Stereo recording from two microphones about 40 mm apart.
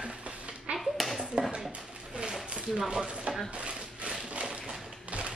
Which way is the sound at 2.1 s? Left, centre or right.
Right.